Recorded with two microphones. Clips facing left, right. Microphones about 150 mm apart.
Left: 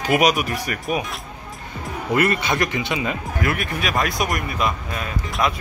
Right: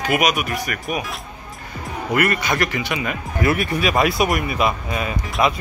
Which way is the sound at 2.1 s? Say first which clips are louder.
Even; 25° left (ahead or behind).